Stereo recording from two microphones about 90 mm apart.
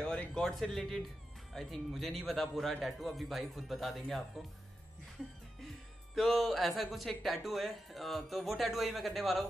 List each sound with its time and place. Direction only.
0.0 s speech: 10° left (ahead or behind)
6.1 s speech: centre (ahead or behind)